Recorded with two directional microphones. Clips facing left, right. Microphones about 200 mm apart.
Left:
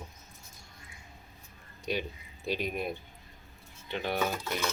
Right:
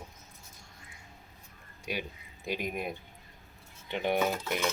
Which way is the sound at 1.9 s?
10° right (ahead or behind).